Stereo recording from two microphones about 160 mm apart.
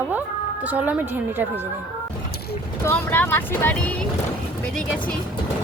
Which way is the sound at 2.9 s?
10° left (ahead or behind).